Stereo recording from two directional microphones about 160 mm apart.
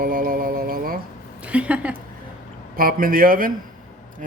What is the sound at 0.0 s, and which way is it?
Music, 60° right (ahead or behind).